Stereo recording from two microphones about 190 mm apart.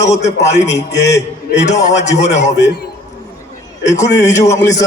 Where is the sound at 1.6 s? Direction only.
35° left (ahead or behind).